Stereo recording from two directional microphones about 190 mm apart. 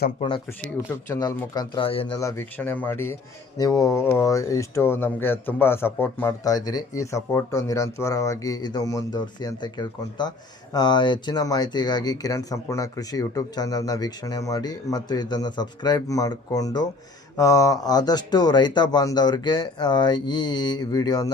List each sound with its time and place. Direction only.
0.2 s speech: 25° left (ahead or behind)
1.1 s speech: 15° left (ahead or behind)
2.1 s speech: 15° left (ahead or behind)